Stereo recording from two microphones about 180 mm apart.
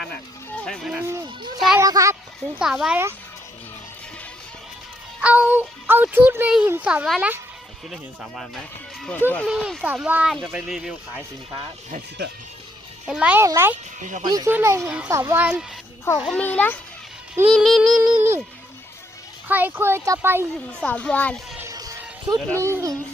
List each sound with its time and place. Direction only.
0.6 s speech: 5° left (ahead or behind)
1.8 s speech: 20° right (ahead or behind)
2.4 s speech: centre (ahead or behind)
5.2 s a child's voice: 10° right (ahead or behind)
13.1 s a child's voice: 5° right (ahead or behind)
14.0 s speech: 45° right (ahead or behind)
14.3 s a child's voice: 20° right (ahead or behind)
16.2 s speech: 5° left (ahead or behind); by 18.4 s 10° right (ahead or behind)
19.5 s a child's voice: 10° right (ahead or behind)
20.8 s speech: 5° left (ahead or behind)
21.7 s music: 20° right (ahead or behind)
22.6 s a child's voice: 15° right (ahead or behind)